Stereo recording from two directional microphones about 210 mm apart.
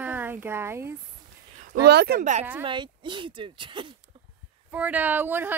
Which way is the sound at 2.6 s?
20° right (ahead or behind).